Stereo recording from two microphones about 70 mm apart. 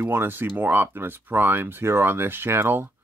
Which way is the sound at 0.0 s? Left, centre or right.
Right.